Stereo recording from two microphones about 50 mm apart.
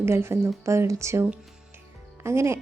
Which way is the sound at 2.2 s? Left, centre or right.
Right.